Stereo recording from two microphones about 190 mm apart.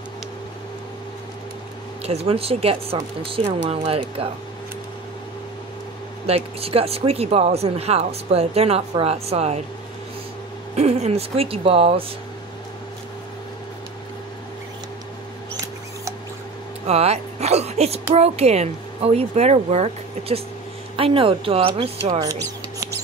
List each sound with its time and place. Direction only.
2.0 s speech: 30° right (ahead or behind)
6.2 s speech: 30° right (ahead or behind)
10.8 s speech: 35° right (ahead or behind)
16.8 s a woman's voice: 35° right (ahead or behind)